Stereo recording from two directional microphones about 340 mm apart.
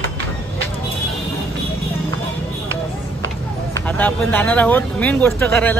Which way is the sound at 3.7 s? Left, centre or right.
Centre.